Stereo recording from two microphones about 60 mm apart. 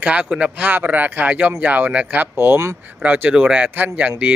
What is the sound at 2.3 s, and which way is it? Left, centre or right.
Speech, right.